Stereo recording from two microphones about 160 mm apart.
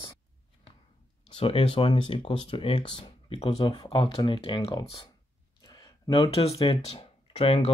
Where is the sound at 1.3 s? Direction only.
35° left (ahead or behind).